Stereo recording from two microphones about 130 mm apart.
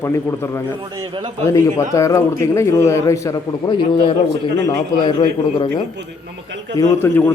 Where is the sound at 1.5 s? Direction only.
25° left (ahead or behind).